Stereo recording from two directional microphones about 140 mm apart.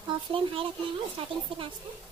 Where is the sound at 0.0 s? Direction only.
40° right (ahead or behind).